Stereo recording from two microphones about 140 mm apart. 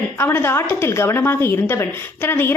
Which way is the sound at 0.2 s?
15° left (ahead or behind).